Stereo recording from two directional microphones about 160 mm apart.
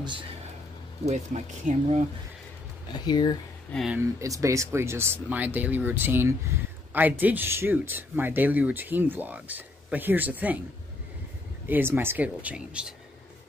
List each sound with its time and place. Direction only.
1.0 s speech: 45° right (ahead or behind)
2.9 s speech: 25° left (ahead or behind)
3.7 s speech: 5° right (ahead or behind)
4.2 s speech: 20° right (ahead or behind)
11.6 s speech: 10° right (ahead or behind)